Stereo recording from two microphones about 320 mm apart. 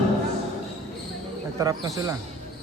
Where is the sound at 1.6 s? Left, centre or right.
Centre.